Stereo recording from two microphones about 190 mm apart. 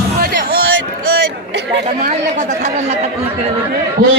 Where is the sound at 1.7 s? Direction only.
50° right (ahead or behind).